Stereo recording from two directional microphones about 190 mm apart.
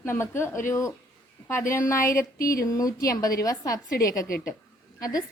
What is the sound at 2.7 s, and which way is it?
Speech, 20° left (ahead or behind).